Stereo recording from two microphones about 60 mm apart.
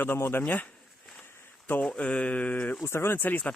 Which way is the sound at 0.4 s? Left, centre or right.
Left.